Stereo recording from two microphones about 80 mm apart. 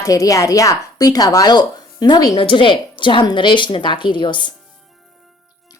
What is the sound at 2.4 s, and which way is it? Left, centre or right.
A woman's voice, left.